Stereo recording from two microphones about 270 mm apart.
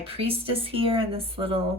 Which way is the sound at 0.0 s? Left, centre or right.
Centre.